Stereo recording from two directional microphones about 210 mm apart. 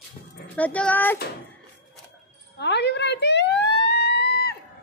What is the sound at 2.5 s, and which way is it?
Emergency vehicle, 55° left (ahead or behind).